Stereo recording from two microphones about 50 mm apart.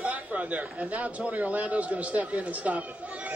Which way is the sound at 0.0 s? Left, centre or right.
Right.